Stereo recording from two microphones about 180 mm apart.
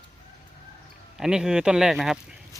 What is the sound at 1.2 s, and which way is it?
Speech, 5° right (ahead or behind).